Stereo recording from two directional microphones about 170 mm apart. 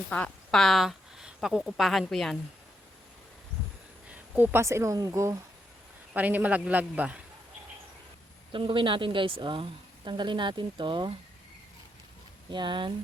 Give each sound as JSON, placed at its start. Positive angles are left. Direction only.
{"t": 0.1, "sound": "a woman's voice", "side_deg": 5}
{"t": 4.1, "sound": "a woman's voice", "side_deg": -10}
{"t": 8.5, "sound": "a woman's voice", "side_deg": -30}
{"t": 12.5, "sound": "a woman's voice", "side_deg": -25}